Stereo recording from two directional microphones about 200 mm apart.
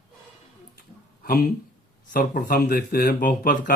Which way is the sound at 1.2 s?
45° left (ahead or behind).